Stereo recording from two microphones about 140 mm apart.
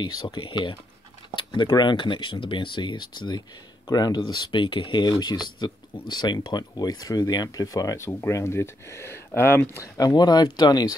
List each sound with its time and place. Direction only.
0.0 s speech: 35° left (ahead or behind)